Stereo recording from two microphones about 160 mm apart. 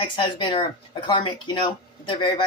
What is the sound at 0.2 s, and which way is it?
Speech, 30° left (ahead or behind).